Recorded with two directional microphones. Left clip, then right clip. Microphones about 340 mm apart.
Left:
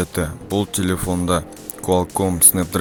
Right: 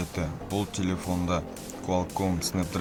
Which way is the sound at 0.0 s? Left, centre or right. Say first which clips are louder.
Left 10 dB; left.